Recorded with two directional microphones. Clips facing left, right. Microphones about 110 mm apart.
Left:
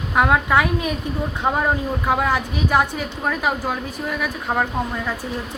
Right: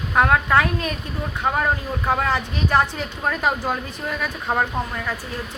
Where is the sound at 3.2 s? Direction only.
Centre (ahead or behind).